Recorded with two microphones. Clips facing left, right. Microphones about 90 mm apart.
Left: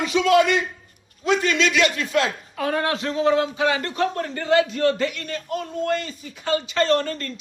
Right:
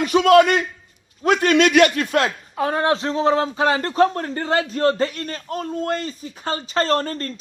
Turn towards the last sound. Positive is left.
turn(degrees=-40)  # may be behind; listen again after turning